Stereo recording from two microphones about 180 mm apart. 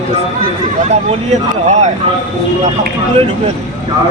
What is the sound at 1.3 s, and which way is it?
Speech, 40° right (ahead or behind).